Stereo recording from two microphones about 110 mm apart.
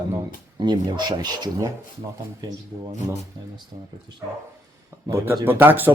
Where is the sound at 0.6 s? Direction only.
40° right (ahead or behind).